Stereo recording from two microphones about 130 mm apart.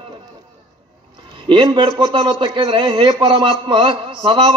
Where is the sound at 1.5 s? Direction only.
40° right (ahead or behind).